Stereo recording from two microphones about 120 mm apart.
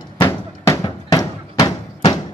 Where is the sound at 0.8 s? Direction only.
30° left (ahead or behind).